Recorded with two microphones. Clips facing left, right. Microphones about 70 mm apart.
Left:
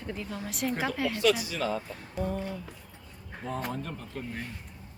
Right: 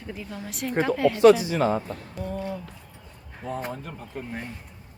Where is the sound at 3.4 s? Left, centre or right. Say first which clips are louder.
Right 3 dB; centre.